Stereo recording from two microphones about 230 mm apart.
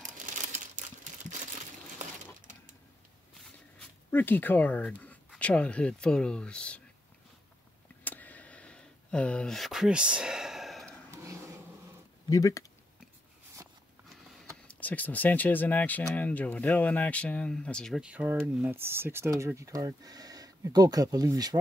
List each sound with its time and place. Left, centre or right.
0.3 s crumpling: right
4.1 s speech: centre
8.0 s a sound: centre
11.1 s a sound: centre
12.3 s speech: centre
14.8 s speech: centre